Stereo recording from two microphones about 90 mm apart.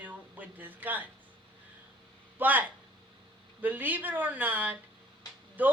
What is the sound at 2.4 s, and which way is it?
Speech, 20° right (ahead or behind).